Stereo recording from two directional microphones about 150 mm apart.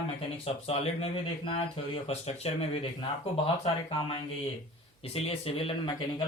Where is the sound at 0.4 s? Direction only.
40° left (ahead or behind).